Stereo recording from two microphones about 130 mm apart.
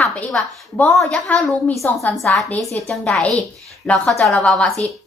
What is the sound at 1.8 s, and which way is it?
A woman's voice, 20° left (ahead or behind).